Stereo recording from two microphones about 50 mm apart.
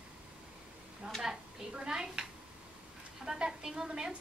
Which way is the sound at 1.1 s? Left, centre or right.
Centre.